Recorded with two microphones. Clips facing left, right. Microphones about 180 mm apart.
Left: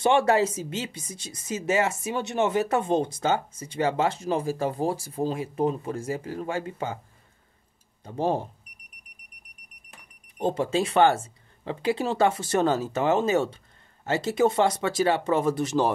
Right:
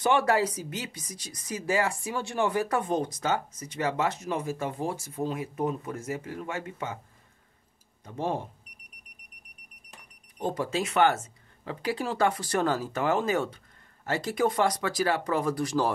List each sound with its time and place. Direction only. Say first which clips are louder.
0.0 s speech: left 3 dB; 25° left (ahead or behind)
8.0 s speech: left 5 dB; 30° left (ahead or behind)
10.4 s speech: left 5 dB; 25° left (ahead or behind)